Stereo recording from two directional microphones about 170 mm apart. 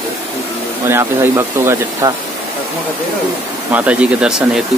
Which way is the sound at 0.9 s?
15° right (ahead or behind).